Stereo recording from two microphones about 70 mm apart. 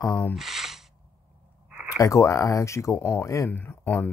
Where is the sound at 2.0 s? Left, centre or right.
Left.